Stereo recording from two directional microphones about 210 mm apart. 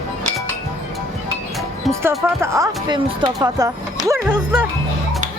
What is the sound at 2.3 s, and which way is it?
Speech, 15° right (ahead or behind).